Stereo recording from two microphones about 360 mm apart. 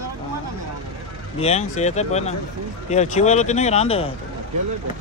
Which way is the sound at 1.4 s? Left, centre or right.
Centre.